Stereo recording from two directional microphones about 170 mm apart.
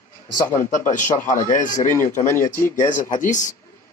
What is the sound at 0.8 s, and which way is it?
A man's voice, 45° left (ahead or behind).